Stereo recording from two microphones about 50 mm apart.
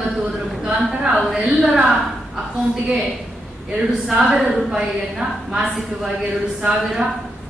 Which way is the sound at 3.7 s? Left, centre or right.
Centre.